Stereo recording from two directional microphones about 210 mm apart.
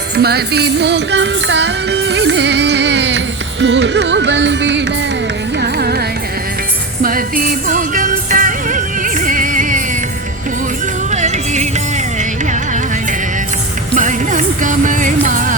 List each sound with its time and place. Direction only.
0.2 s music: 50° right (ahead or behind)
5.5 s carnatic music: 50° right (ahead or behind)
7.0 s music: 40° right (ahead or behind)
11.1 s music: 35° right (ahead or behind)
13.9 s music: 35° right (ahead or behind)